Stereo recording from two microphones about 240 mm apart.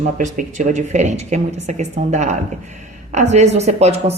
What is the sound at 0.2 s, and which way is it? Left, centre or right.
A woman's voice, right.